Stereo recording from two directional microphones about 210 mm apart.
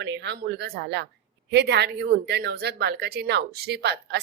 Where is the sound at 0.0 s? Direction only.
55° right (ahead or behind).